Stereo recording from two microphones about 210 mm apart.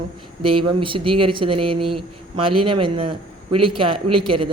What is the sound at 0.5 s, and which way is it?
Speech, 25° right (ahead or behind).